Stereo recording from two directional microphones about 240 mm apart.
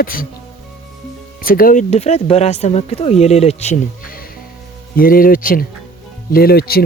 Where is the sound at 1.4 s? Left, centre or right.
Left.